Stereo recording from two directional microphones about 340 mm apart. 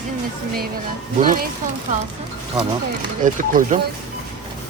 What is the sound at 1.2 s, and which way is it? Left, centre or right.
Speech, right.